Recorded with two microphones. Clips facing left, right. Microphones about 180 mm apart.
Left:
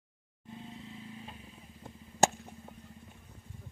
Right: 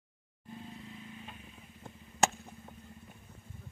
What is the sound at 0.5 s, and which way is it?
Vehicle, 20° left (ahead or behind).